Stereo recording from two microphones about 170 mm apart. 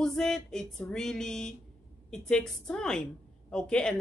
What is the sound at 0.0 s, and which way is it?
Speech, 5° left (ahead or behind).